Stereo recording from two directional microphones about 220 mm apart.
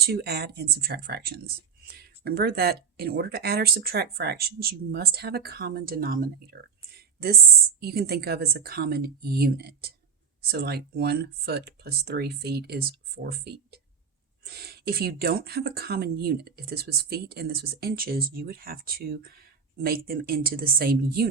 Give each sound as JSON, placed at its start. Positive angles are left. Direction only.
{"t": 0.0, "sound": "speech", "side_deg": -45}